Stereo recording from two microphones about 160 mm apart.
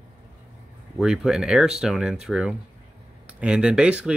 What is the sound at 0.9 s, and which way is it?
Speech, 5° right (ahead or behind).